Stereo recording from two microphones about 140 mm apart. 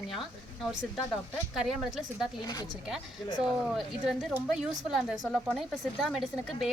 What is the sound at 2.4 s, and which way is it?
Speech, 25° left (ahead or behind).